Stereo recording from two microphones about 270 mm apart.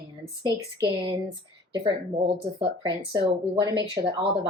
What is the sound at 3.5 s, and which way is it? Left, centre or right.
Speech, centre.